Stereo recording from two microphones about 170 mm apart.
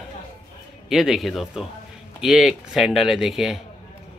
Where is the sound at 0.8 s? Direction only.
Centre (ahead or behind).